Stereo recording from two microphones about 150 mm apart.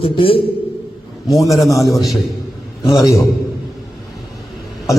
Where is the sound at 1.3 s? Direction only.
20° left (ahead or behind).